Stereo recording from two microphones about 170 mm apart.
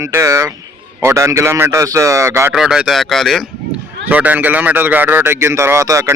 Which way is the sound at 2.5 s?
5° right (ahead or behind).